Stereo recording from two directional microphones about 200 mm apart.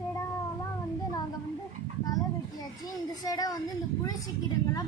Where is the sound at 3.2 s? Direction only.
20° left (ahead or behind).